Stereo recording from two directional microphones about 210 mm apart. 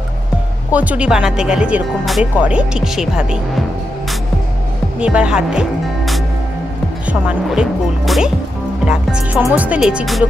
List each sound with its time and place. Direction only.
0.7 s speech: 5° right (ahead or behind)
5.0 s speech: 5° right (ahead or behind)